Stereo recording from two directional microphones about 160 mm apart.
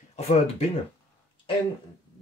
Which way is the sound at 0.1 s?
40° left (ahead or behind).